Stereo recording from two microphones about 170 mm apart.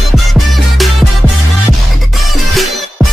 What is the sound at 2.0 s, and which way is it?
Music, centre (ahead or behind).